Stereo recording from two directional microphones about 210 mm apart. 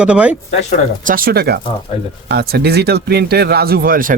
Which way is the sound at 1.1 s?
45° right (ahead or behind).